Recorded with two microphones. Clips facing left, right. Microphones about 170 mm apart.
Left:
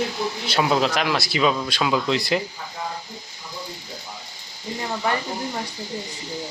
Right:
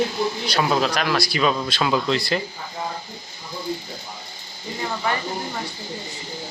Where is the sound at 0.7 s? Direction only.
20° left (ahead or behind).